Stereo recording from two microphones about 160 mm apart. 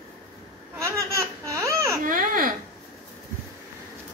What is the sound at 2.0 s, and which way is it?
Baby cry, 60° right (ahead or behind).